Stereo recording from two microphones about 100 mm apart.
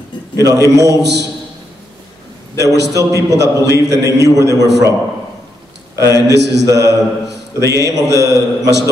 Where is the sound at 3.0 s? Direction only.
30° right (ahead or behind).